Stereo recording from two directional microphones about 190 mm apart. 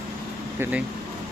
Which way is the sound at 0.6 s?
10° right (ahead or behind).